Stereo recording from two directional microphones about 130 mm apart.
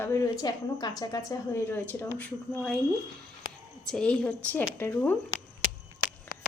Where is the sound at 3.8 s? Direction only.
5° left (ahead or behind).